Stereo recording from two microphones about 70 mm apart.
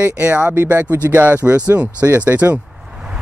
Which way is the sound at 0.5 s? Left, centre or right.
Right.